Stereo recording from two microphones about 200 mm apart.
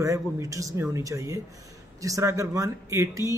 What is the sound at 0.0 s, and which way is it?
Speech, 15° right (ahead or behind).